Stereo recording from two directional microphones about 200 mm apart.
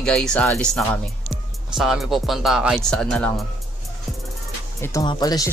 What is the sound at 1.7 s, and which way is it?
Speech, centre (ahead or behind).